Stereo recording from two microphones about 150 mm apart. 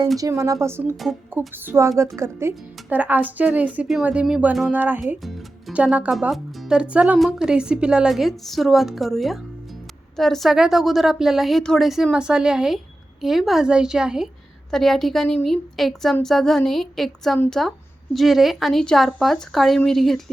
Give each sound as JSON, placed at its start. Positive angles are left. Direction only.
{"t": 0.2, "sound": "speech", "side_deg": -20}